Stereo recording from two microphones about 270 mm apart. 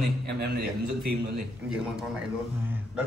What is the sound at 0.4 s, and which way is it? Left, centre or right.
Speech, right.